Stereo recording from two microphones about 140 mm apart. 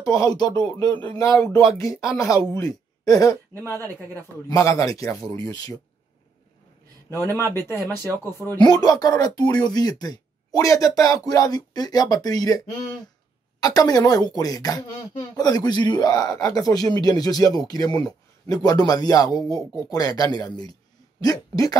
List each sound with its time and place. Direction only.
0.0 s speech: 25° left (ahead or behind)
4.5 s speech: 25° left (ahead or behind)
7.1 s speech: 20° right (ahead or behind)
8.5 s speech: 30° left (ahead or behind)